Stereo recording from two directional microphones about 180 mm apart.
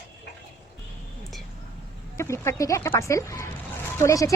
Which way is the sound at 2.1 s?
15° left (ahead or behind).